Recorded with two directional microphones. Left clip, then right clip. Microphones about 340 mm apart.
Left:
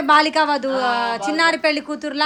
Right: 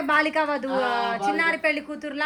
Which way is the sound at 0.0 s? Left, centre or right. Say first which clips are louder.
Left 7 dB; centre.